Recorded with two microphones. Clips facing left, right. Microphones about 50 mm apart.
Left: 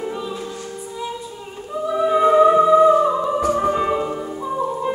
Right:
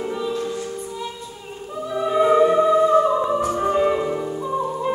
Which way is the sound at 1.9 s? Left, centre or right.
Centre.